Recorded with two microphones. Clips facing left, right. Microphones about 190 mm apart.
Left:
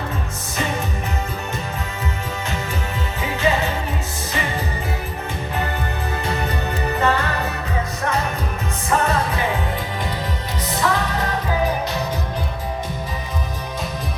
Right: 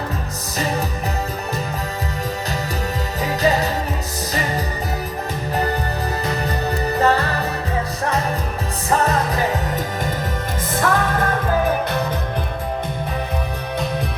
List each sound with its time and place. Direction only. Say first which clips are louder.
3.2 s music: right 2 dB; 40° right (ahead or behind)
6.3 s music: right 2 dB; 35° right (ahead or behind)
8.9 s music: right 1 dB; 35° right (ahead or behind)
10.7 s music: right 2 dB; 50° right (ahead or behind)